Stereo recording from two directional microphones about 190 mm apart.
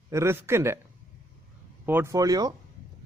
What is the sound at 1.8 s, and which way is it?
Speech, 15° right (ahead or behind).